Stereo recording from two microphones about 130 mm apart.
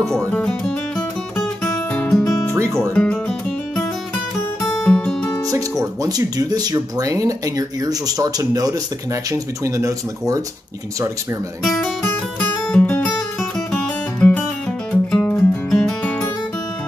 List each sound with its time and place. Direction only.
0.3 s speech: 10° left (ahead or behind)
2.0 s music: 5° left (ahead or behind)
2.2 s music: 25° left (ahead or behind)
2.5 s speech: 20° right (ahead or behind)
2.9 s music: 10° left (ahead or behind)
4.8 s guitar: 5° left (ahead or behind)
5.5 s speech: 30° right (ahead or behind)
11.6 s speech: centre (ahead or behind)
12.0 s music: 15° left (ahead or behind)
14.9 s music: 10° left (ahead or behind)